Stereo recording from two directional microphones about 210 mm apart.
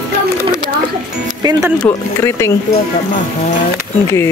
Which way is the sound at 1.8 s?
10° left (ahead or behind).